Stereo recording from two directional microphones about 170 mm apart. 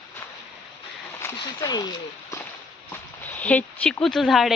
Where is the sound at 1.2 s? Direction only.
20° left (ahead or behind).